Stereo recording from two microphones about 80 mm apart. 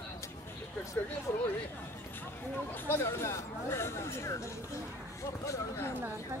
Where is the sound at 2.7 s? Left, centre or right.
Left.